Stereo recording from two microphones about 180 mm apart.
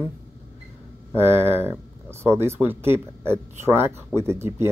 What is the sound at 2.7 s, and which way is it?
Speech, 15° right (ahead or behind).